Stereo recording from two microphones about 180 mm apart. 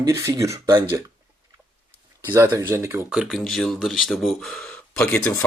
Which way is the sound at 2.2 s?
15° right (ahead or behind).